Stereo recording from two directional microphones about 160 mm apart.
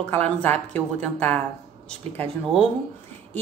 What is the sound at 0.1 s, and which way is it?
A woman's voice, 10° left (ahead or behind).